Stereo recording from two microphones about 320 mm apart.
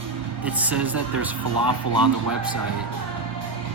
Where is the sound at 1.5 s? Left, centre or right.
Right.